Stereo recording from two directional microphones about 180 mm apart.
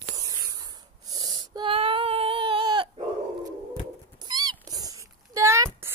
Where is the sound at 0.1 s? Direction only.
20° right (ahead or behind).